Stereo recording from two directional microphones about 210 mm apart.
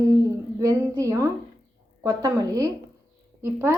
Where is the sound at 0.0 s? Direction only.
15° right (ahead or behind).